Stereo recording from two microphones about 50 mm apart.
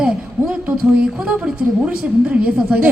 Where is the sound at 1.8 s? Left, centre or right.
Right.